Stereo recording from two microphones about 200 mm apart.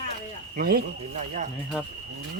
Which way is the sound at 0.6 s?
50° right (ahead or behind).